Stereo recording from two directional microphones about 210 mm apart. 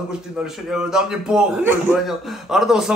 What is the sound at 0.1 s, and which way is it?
A man's voice, 5° right (ahead or behind).